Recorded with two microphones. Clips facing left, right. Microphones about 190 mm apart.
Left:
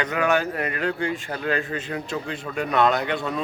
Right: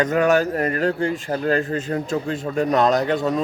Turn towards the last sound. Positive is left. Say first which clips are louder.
# right 5 dB
turn(degrees=-40)  # may be behind; listen again after turning